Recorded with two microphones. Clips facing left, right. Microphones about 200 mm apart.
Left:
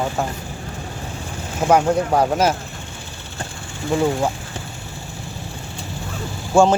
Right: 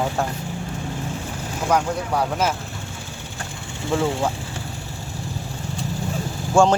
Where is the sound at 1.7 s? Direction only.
50° left (ahead or behind).